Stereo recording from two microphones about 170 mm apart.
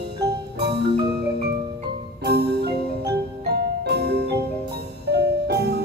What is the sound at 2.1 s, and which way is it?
Marimba, 70° right (ahead or behind).